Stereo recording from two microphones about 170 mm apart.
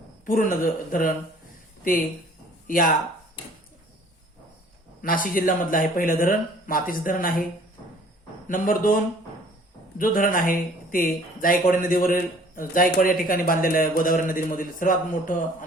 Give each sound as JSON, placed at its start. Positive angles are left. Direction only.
{"t": 0.3, "sound": "speech", "side_deg": 55}
{"t": 5.0, "sound": "speech", "side_deg": 55}
{"t": 8.4, "sound": "speech", "side_deg": 55}
{"t": 10.0, "sound": "speech", "side_deg": 55}